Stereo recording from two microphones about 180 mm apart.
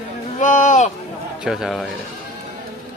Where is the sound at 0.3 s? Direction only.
45° left (ahead or behind).